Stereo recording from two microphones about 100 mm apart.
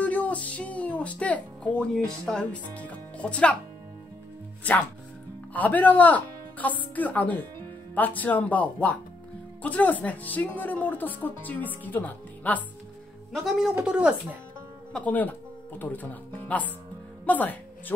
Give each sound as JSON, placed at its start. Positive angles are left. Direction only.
{"t": 0.0, "sound": "speech", "side_deg": 15}
{"t": 5.5, "sound": "speech", "side_deg": 15}
{"t": 13.3, "sound": "speech", "side_deg": 0}
{"t": 13.8, "sound": "speech", "side_deg": -10}
{"t": 14.9, "sound": "speech", "side_deg": 15}